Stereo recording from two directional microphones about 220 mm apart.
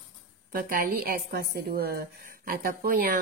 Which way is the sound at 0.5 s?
40° right (ahead or behind).